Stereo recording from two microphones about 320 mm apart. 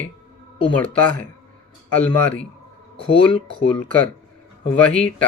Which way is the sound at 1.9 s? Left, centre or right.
Centre.